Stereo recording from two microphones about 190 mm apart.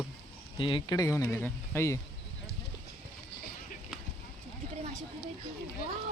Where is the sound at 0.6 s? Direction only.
25° left (ahead or behind).